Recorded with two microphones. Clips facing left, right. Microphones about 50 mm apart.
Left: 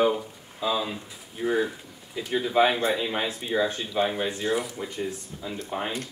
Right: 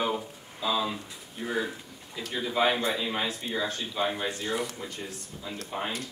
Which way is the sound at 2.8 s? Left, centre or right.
Left.